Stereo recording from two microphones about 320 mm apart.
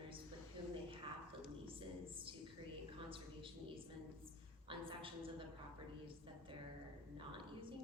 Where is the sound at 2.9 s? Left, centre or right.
Centre.